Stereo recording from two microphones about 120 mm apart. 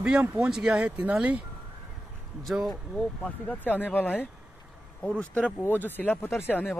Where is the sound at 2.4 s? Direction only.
Centre (ahead or behind).